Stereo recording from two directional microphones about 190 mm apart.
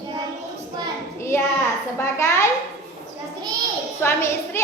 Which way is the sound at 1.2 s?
15° left (ahead or behind).